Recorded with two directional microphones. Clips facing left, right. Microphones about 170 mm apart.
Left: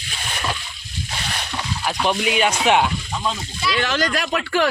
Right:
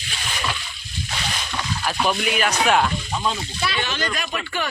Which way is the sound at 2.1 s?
20° left (ahead or behind).